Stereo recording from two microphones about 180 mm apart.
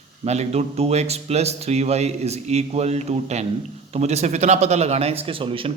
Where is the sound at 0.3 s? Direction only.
35° right (ahead or behind).